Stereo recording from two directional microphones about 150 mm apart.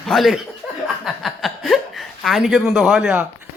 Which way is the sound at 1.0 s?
Centre (ahead or behind).